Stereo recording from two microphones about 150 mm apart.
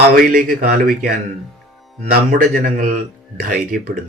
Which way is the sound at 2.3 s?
65° right (ahead or behind).